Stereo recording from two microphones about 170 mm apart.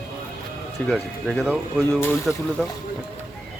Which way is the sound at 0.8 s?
Centre (ahead or behind).